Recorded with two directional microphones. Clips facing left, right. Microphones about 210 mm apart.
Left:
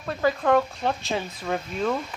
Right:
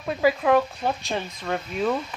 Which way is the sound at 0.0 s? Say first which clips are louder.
Right 2 dB; 10° right (ahead or behind).